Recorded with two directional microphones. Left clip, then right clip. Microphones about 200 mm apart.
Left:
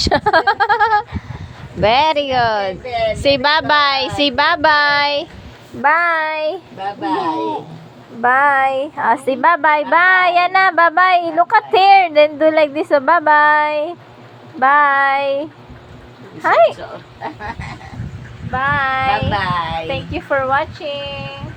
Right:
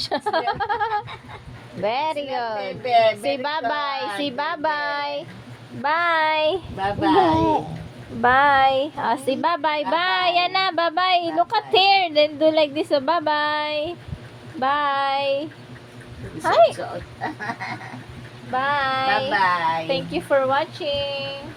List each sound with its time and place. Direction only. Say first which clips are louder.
0.0 s a sound: left 9 dB; 25° left (ahead or behind)
1.8 s a woman's voice: left 10 dB; 30° left (ahead or behind)
5.8 s a woman's voice: left 6 dB; 5° left (ahead or behind)
8.2 s a woman's voice: left 3 dB; 5° right (ahead or behind); by 16.7 s 10° left (ahead or behind)
18.5 s a woman's voice: left 5 dB; 10° left (ahead or behind)
19.3 s speech: left 1 dB; 20° right (ahead or behind)
19.9 s a woman's voice: left 2 dB; 10° left (ahead or behind)